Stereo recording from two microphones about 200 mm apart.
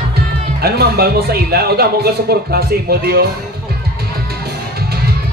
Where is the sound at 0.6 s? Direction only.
50° right (ahead or behind).